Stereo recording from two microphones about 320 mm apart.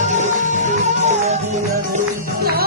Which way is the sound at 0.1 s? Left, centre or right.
Right.